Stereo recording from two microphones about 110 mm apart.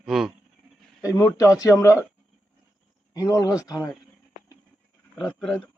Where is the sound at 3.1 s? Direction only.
30° left (ahead or behind).